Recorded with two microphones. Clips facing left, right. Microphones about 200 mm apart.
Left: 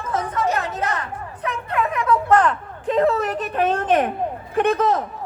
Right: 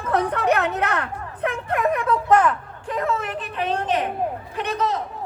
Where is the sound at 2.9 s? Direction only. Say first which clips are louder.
Left 6 dB; 30° left (ahead or behind).